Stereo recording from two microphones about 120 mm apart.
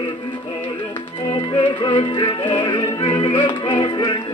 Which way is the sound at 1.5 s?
40° left (ahead or behind).